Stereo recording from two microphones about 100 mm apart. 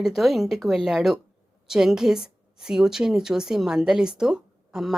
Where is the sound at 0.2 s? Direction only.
Centre (ahead or behind).